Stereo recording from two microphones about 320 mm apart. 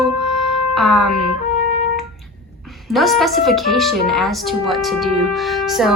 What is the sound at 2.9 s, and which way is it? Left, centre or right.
A woman's voice, centre.